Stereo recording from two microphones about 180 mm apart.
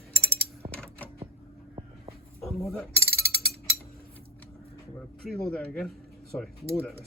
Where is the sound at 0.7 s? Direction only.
10° left (ahead or behind).